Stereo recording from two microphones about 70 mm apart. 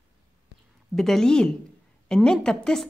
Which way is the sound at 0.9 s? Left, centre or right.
Centre.